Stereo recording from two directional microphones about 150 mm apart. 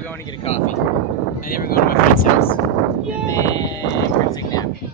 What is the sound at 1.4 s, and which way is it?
Speech, 75° left (ahead or behind).